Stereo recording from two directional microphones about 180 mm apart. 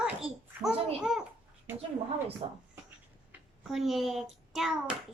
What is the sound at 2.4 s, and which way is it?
Speech, 35° right (ahead or behind).